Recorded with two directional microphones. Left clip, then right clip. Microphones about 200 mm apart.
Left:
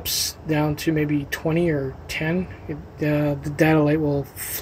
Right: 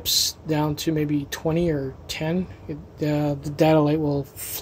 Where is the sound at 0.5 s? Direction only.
15° right (ahead or behind).